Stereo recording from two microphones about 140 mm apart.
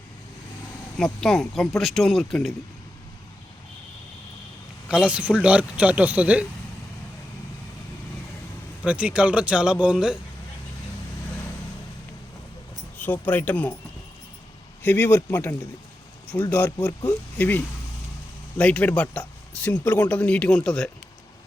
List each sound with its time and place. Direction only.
0.9 s speech: 5° left (ahead or behind)
4.9 s speech: 5° right (ahead or behind)
8.8 s speech: 10° right (ahead or behind)
13.0 s speech: 15° left (ahead or behind)
14.8 s speech: 15° left (ahead or behind)
17.3 s speech: 15° left (ahead or behind)